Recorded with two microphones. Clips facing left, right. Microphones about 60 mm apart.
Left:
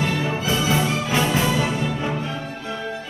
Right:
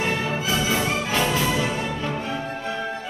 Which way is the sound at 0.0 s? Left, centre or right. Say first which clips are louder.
Left 1 dB; right.